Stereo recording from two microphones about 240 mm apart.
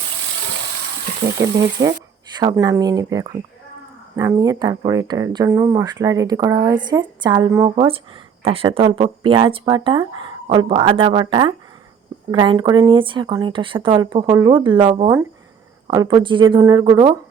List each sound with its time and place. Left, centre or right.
1.2 s speech: centre